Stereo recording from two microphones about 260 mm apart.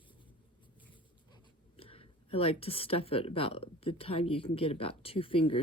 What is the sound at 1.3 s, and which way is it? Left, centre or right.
Speech, left.